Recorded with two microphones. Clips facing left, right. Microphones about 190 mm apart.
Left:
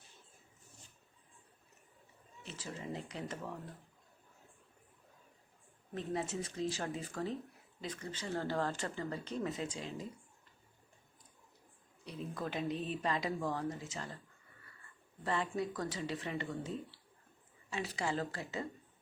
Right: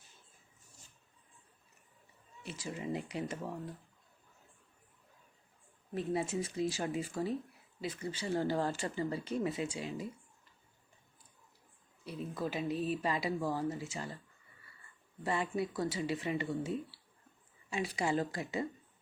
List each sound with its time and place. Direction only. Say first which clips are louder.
2.4 s speech: right 4 dB; 10° right (ahead or behind)
5.9 s speech: right 4 dB; 10° right (ahead or behind)
12.0 s speech: right 3 dB; 5° right (ahead or behind)
15.2 s speech: right 2 dB; 10° right (ahead or behind)